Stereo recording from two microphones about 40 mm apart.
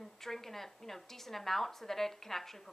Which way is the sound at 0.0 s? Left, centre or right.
Centre.